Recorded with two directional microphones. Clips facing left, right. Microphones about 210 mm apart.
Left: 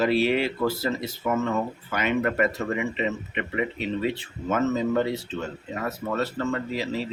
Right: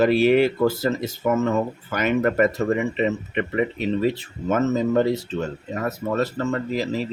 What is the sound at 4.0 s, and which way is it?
Speech, 40° right (ahead or behind).